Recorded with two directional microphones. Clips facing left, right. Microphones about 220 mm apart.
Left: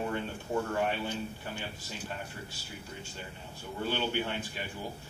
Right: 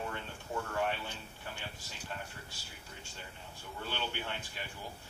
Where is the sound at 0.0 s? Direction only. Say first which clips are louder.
Left 7 dB; 20° left (ahead or behind).